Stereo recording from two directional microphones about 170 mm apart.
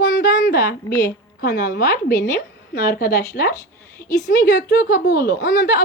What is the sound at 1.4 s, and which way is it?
A woman's voice, 65° left (ahead or behind).